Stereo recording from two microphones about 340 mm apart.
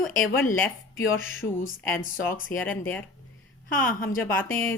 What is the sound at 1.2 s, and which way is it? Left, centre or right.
Speech, left.